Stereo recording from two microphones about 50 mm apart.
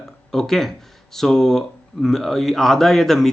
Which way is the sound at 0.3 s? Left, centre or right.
Centre.